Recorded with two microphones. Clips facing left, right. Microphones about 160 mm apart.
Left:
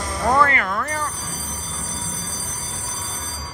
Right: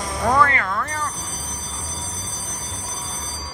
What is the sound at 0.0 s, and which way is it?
Music, centre (ahead or behind).